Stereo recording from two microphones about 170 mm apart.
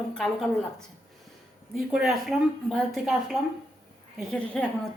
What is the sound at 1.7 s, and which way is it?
A woman's voice, centre (ahead or behind).